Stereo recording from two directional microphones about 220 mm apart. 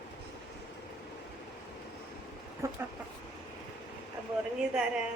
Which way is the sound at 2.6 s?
15° right (ahead or behind).